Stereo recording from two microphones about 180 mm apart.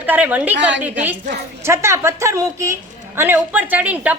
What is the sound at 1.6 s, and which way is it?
A woman's voice, 15° right (ahead or behind).